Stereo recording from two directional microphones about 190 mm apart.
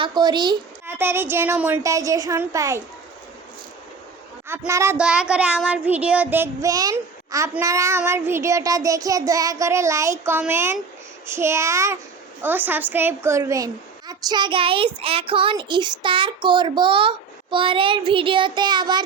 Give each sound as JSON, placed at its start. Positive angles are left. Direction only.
{"t": 0.0, "sound": "a child's voice", "side_deg": -20}
{"t": 0.9, "sound": "child singing", "side_deg": -10}
{"t": 4.4, "sound": "child singing", "side_deg": -10}
{"t": 14.1, "sound": "a child's voice", "side_deg": -20}